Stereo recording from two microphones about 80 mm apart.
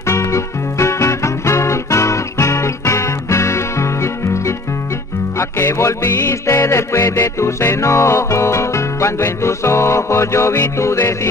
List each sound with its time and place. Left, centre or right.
0.1 s music: left